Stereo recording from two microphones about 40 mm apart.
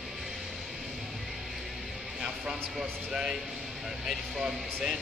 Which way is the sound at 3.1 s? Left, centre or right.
Centre.